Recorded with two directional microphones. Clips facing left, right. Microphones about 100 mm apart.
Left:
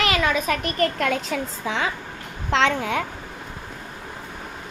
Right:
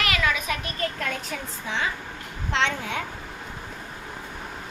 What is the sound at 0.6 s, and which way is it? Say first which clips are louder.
Speech: left 7 dB; 85° left.